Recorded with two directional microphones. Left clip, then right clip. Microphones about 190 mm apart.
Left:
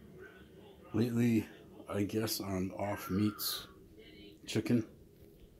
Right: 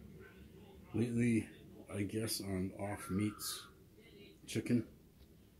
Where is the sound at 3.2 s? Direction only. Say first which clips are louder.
Left 5 dB; 30° left (ahead or behind).